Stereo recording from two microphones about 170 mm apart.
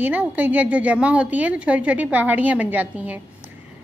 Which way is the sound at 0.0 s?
10° right (ahead or behind).